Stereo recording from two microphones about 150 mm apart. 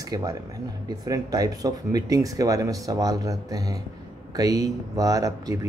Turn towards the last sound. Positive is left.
turn(degrees=-20)  # may be behind; listen again after turning